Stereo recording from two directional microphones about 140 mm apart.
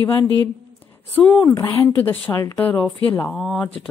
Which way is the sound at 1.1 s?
10° left (ahead or behind).